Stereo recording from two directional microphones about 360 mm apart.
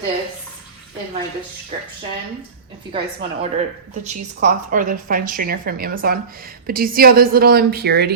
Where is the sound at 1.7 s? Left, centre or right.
Centre.